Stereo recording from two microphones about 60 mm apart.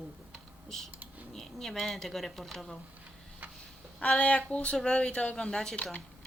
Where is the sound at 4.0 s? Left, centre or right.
Left.